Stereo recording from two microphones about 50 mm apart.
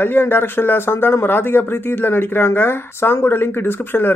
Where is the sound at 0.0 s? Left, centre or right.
Left.